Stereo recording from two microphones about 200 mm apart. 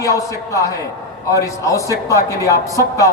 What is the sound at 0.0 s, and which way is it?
A man's voice, 15° left (ahead or behind).